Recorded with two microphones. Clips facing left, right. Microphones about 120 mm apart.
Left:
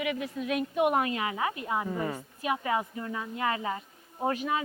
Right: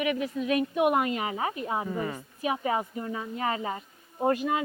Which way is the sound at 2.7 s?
25° right (ahead or behind).